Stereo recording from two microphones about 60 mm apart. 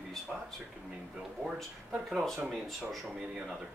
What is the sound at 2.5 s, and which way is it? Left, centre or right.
Speech, centre.